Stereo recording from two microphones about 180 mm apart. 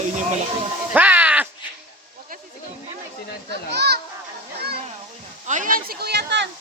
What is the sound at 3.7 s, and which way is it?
Children playing, 65° right (ahead or behind).